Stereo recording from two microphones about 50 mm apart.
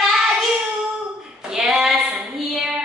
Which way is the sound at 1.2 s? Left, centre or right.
Centre.